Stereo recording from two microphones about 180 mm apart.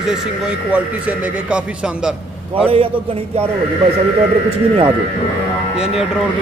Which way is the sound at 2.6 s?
30° right (ahead or behind).